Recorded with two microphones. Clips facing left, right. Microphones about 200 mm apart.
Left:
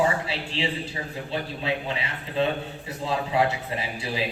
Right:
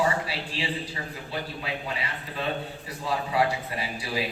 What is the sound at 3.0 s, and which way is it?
A man's voice, 25° left (ahead or behind).